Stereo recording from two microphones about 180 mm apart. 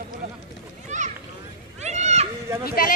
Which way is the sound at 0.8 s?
40° right (ahead or behind).